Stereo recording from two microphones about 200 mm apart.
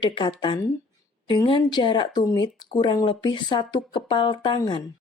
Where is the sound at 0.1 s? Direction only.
25° left (ahead or behind).